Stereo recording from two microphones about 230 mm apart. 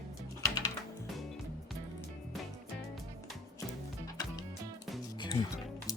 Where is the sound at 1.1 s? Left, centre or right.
Centre.